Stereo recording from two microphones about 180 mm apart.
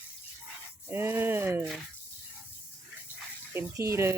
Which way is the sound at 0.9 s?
10° right (ahead or behind).